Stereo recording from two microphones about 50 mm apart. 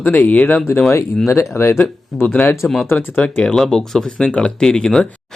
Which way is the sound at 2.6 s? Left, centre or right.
Left.